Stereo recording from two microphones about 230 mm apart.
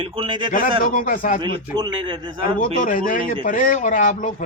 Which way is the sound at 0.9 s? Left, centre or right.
Left.